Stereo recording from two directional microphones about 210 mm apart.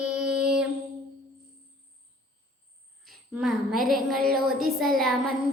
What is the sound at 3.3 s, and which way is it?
Child singing, centre (ahead or behind).